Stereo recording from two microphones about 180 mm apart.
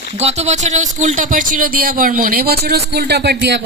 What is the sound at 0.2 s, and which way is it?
Speech, 35° right (ahead or behind).